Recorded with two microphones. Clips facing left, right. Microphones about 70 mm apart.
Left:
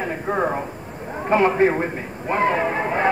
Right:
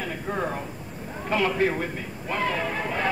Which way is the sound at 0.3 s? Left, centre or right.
Left.